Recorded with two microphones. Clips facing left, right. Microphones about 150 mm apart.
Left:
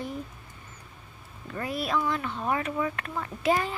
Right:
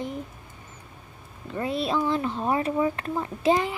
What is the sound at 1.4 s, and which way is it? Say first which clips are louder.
A woman's voice: right 4 dB; 25° right (ahead or behind).